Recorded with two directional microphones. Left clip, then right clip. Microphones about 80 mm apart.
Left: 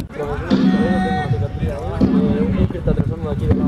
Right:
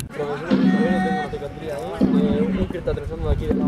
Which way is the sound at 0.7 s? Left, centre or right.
Centre.